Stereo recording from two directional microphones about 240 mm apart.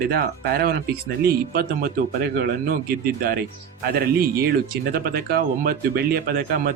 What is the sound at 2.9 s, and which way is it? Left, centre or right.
Speech, right.